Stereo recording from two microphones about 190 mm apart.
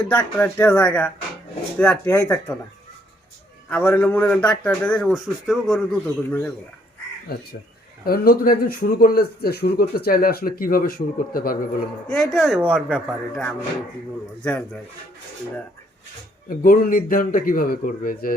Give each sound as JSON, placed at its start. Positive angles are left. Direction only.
{"t": 0.0, "sound": "a man's voice", "side_deg": 10}
{"t": 3.7, "sound": "a man's voice", "side_deg": 10}
{"t": 7.3, "sound": "speech", "side_deg": 55}
{"t": 12.3, "sound": "a man's voice", "side_deg": 0}
{"t": 16.5, "sound": "speech", "side_deg": 45}